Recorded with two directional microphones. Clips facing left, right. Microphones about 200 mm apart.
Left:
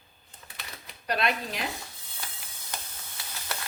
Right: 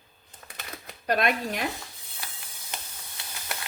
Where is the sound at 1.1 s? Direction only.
50° right (ahead or behind).